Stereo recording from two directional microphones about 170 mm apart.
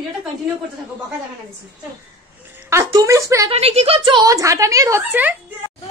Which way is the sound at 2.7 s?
15° right (ahead or behind).